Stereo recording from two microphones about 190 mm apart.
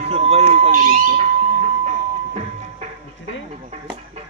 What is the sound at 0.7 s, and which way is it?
Speech, 45° right (ahead or behind).